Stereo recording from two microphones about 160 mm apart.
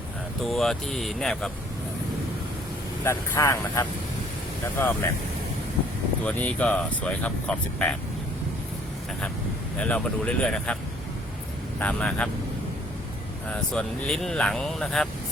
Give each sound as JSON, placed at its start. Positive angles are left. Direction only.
{"t": 0.4, "sound": "speech", "side_deg": 0}
{"t": 3.0, "sound": "speech", "side_deg": 15}
{"t": 6.2, "sound": "speech", "side_deg": 10}
{"t": 9.7, "sound": "speech", "side_deg": 5}
{"t": 11.8, "sound": "speech", "side_deg": 10}
{"t": 13.5, "sound": "speech", "side_deg": 5}